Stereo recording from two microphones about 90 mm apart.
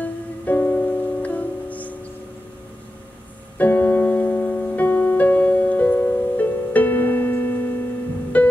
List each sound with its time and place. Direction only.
0.0 s music: 20° left (ahead or behind)
3.5 s music: 20° left (ahead or behind)